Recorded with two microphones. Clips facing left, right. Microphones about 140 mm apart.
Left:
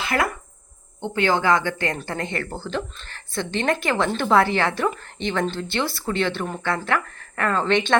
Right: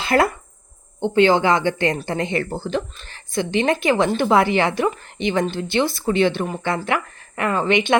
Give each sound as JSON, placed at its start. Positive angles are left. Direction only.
{"t": 0.0, "sound": "speech", "side_deg": -30}